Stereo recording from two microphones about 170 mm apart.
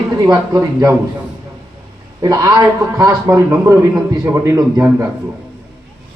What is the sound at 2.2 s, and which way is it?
A man's voice, 20° right (ahead or behind).